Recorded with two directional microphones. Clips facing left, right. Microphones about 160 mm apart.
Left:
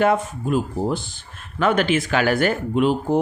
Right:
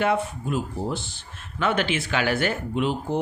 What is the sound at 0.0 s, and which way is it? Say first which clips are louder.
Speech: left 4 dB; 50° left (ahead or behind).